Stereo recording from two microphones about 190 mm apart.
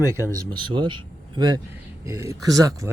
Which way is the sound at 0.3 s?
25° right (ahead or behind).